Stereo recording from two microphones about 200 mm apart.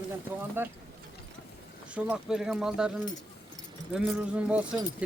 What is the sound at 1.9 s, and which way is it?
Speech, 5° right (ahead or behind).